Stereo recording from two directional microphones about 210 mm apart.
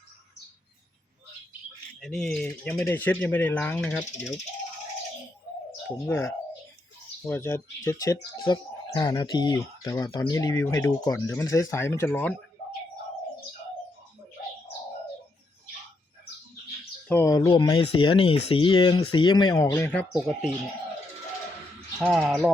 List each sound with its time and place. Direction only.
2.0 s speech: 5° left (ahead or behind)
6.1 s speech: 10° left (ahead or behind)
17.1 s speech: 15° left (ahead or behind)
20.1 s speech: centre (ahead or behind)
21.9 s speech: centre (ahead or behind)